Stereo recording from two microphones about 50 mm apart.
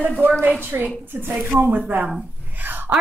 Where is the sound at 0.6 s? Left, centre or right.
Right.